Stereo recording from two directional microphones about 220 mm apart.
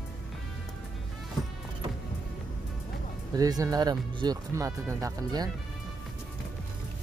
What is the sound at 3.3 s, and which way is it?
Speech, 15° right (ahead or behind).